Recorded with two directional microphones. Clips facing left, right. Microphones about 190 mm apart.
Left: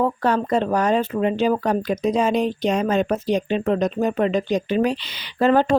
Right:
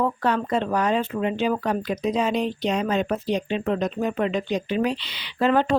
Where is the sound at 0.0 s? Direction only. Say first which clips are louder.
Left 3 dB; 40° left (ahead or behind).